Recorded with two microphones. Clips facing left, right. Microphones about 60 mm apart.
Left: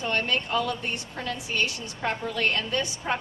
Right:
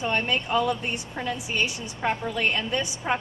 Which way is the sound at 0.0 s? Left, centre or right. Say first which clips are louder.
Right 1 dB; centre.